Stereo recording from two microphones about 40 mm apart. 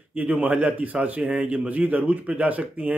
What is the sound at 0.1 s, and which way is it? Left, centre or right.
A man's voice, right.